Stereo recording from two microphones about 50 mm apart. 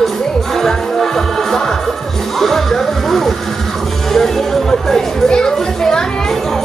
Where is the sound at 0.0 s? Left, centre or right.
Centre.